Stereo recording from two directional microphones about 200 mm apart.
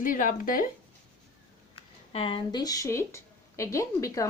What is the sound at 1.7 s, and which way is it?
A woman's voice, 25° left (ahead or behind).